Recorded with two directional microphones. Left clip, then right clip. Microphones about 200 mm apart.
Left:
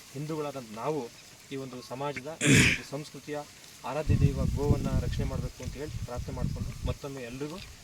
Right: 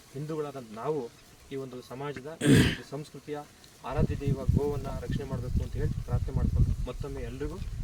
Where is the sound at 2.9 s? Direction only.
5° right (ahead or behind).